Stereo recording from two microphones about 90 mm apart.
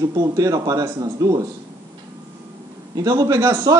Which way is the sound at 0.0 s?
40° right (ahead or behind).